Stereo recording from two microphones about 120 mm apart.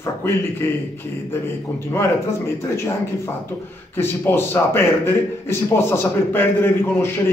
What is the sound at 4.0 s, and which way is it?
A man's voice, 20° left (ahead or behind).